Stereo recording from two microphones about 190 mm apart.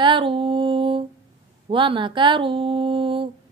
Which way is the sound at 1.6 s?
25° right (ahead or behind).